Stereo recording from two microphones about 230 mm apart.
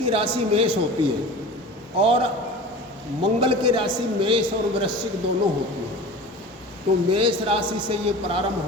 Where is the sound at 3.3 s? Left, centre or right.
Right.